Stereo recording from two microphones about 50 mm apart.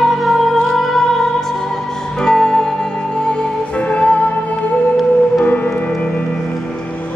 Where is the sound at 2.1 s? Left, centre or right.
Centre; by 6.2 s left.